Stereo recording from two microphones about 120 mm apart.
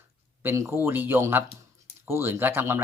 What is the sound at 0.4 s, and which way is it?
Speech, 20° right (ahead or behind).